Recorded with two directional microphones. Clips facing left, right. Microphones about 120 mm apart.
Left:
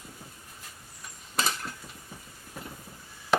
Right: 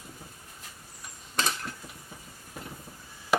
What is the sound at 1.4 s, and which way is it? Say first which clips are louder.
Cutlery: even; 5° left (ahead or behind).